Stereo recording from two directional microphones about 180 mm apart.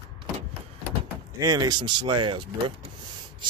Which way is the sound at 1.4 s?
20° right (ahead or behind).